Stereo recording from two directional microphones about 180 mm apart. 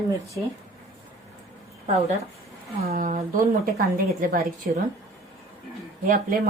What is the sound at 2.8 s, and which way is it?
A woman's voice, 40° right (ahead or behind).